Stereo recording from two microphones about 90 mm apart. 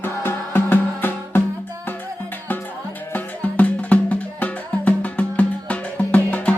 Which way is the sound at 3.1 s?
15° left (ahead or behind).